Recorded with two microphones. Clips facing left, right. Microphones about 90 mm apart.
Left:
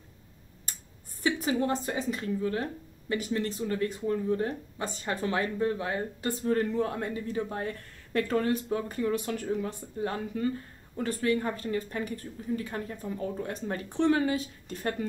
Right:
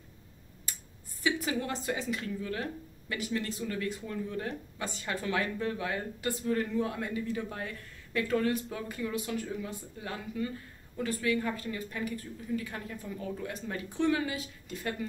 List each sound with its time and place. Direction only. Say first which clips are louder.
1.2 s speech: left 4 dB; 35° left (ahead or behind)